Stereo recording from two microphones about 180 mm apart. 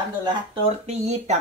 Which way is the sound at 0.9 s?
40° right (ahead or behind).